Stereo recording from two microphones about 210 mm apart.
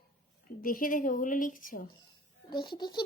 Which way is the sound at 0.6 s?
40° left (ahead or behind).